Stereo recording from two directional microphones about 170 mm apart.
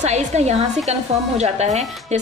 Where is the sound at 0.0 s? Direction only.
40° right (ahead or behind).